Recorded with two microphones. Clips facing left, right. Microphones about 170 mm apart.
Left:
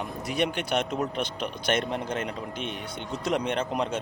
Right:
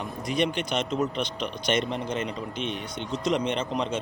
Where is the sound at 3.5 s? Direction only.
10° left (ahead or behind).